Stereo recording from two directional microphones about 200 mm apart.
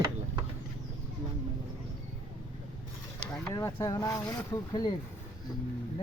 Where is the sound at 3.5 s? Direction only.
15° left (ahead or behind).